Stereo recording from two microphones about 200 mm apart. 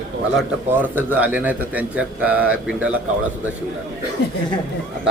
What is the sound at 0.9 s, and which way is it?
A man's voice, 10° right (ahead or behind).